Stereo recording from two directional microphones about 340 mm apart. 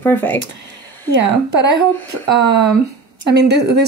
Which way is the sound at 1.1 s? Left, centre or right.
Right.